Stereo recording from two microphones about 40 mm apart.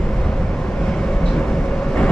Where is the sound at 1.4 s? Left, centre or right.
Centre.